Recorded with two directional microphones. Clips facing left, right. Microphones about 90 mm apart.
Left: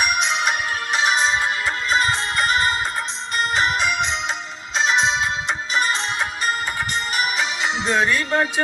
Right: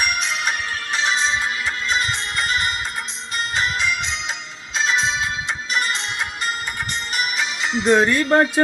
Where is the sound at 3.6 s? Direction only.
30° left (ahead or behind).